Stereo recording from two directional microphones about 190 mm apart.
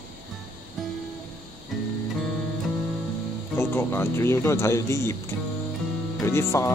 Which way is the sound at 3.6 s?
10° left (ahead or behind).